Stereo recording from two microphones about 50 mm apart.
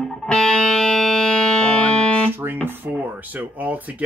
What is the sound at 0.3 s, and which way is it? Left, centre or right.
Music, centre.